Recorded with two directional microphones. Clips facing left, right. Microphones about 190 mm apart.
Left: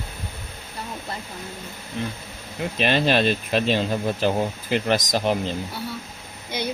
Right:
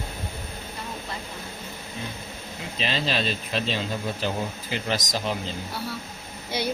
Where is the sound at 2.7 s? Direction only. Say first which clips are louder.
Left 7 dB; 60° left (ahead or behind).